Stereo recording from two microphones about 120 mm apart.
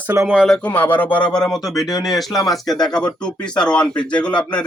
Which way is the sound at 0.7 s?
15° left (ahead or behind).